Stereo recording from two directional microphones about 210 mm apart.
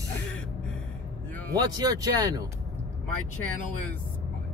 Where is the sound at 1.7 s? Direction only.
20° right (ahead or behind).